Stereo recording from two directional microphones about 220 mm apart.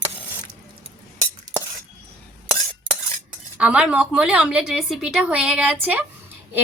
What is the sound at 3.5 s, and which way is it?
A woman's voice, 5° right (ahead or behind).